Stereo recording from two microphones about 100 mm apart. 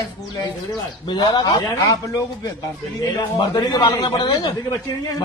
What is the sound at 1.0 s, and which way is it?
Speech, 50° left (ahead or behind).